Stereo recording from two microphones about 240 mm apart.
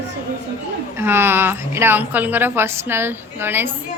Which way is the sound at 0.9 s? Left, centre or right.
Centre.